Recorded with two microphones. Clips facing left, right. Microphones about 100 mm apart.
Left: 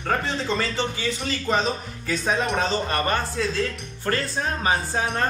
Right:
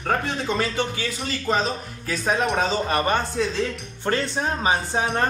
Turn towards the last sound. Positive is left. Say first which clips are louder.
# right 1 dB
turn(degrees=-20)  # may be behind; listen again after turning